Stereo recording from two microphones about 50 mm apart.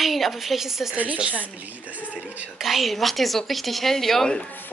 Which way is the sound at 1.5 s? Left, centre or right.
Right.